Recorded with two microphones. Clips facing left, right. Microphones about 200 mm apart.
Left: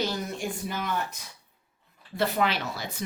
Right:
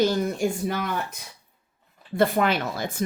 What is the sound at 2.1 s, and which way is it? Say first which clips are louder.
Speech: right 5 dB; 50° right (ahead or behind).